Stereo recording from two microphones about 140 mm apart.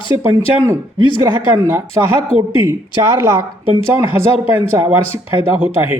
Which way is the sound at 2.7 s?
20° right (ahead or behind).